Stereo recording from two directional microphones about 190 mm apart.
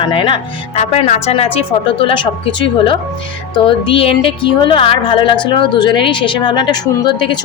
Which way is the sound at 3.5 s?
25° left (ahead or behind).